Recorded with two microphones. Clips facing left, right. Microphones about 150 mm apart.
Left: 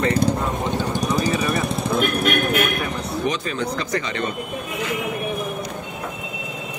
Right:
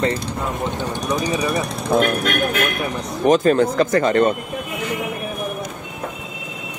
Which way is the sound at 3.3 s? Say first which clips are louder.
Right 13 dB; 50° right (ahead or behind).